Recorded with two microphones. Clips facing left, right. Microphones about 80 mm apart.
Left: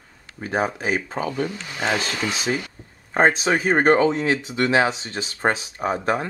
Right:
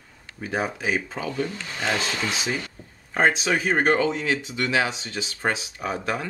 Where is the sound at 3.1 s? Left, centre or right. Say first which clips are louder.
Left 3 dB; left.